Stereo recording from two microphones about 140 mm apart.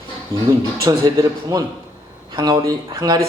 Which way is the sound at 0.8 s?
25° right (ahead or behind).